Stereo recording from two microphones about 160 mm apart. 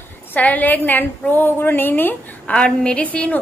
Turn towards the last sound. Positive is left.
turn(degrees=10)  # may be behind; listen again after turning